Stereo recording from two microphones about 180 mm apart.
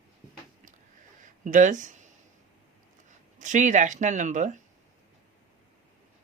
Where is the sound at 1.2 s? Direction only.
45° right (ahead or behind).